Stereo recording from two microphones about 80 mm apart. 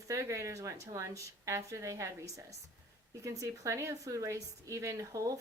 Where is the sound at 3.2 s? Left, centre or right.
Right.